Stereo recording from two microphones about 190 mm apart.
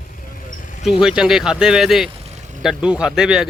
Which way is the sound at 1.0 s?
5° right (ahead or behind).